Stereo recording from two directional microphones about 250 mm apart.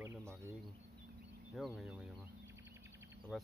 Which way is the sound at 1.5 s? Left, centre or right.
Centre.